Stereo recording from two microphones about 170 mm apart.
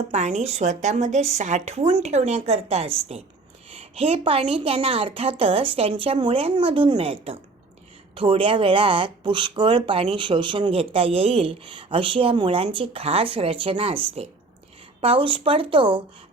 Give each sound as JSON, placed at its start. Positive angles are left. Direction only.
{"t": 0.1, "sound": "speech", "side_deg": -45}